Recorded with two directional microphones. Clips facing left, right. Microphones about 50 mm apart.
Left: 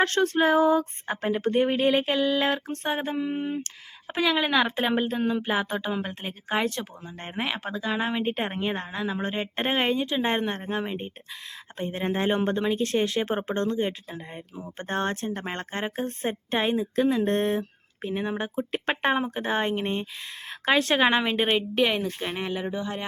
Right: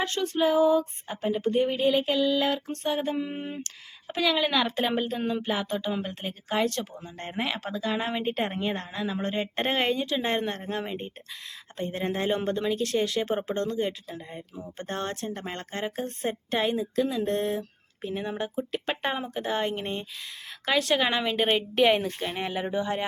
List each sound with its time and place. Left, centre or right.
0.0 s female singing: left
3.2 s a sound: centre
4.0 s speech: left
16.9 s speech: left
17.6 s speech: left
20.5 s speech: left
21.4 s speech: centre
21.8 s speech: centre
22.4 s a sound: centre
22.6 s speech: centre